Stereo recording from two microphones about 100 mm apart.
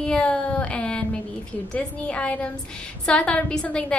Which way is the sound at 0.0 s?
10° left (ahead or behind).